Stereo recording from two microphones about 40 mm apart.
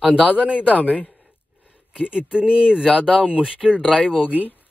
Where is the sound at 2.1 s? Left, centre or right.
Right.